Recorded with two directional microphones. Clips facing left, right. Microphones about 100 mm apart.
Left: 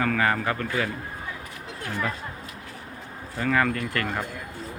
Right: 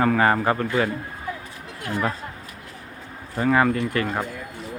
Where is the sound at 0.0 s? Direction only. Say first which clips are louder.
Right 5 dB; 30° right (ahead or behind).